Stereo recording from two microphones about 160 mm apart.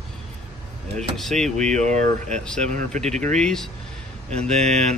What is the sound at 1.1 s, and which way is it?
Speech, centre (ahead or behind).